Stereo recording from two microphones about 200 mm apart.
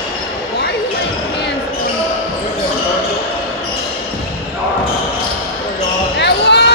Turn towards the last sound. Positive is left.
turn(degrees=60)  # may be behind; listen again after turning